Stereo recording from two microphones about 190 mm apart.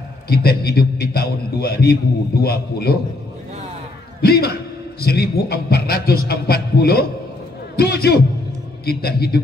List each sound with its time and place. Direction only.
0.3 s a man's voice: 55° left (ahead or behind)
4.2 s a man's voice: 55° left (ahead or behind)